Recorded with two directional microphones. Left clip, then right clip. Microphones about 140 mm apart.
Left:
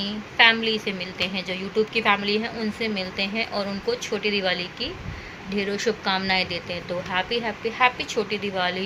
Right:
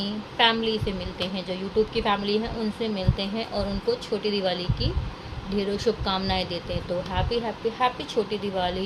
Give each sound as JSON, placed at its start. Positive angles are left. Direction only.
{"t": 0.0, "sound": "a woman's voice", "side_deg": -15}